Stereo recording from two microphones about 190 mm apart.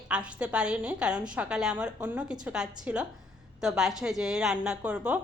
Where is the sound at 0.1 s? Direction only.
5° right (ahead or behind).